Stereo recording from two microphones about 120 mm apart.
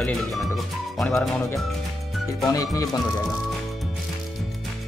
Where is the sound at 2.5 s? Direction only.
30° left (ahead or behind).